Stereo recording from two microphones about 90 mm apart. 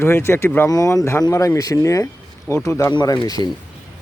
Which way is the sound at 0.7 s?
40° left (ahead or behind).